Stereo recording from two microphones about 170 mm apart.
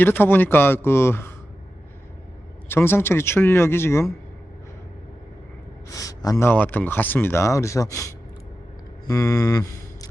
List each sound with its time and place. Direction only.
0.0 s speech: 10° left (ahead or behind)
2.6 s speech: 15° left (ahead or behind)
5.9 s speech: 20° left (ahead or behind)